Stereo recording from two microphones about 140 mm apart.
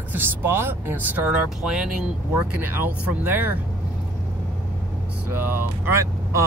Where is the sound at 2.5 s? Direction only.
15° right (ahead or behind).